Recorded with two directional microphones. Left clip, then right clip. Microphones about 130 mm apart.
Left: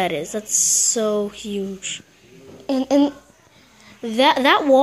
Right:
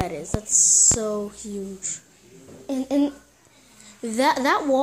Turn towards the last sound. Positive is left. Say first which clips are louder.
# left 5 dB
turn(degrees=0)  # may be behind; listen again after turning